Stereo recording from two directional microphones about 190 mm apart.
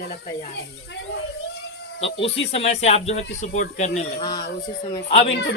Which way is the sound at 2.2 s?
30° left (ahead or behind).